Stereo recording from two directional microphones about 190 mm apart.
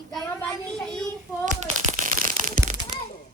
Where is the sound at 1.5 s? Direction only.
40° right (ahead or behind).